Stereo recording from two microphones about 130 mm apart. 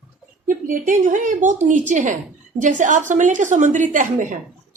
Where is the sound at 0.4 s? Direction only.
90° right.